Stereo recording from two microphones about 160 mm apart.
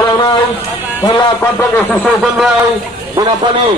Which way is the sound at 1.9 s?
Centre (ahead or behind).